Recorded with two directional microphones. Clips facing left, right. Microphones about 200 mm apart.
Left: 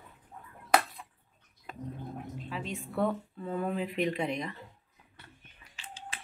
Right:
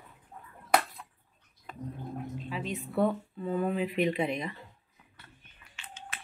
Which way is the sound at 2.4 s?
Centre (ahead or behind).